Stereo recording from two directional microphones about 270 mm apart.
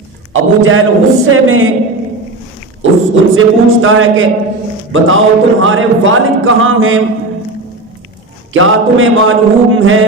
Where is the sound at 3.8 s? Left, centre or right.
Right.